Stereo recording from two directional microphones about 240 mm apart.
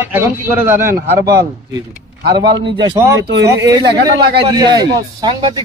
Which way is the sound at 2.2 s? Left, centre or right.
Right.